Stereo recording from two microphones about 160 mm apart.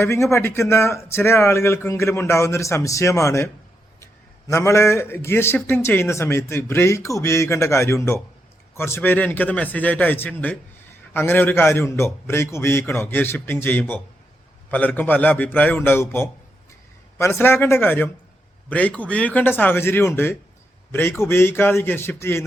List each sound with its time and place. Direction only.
0.0 s a man's voice: 15° left (ahead or behind)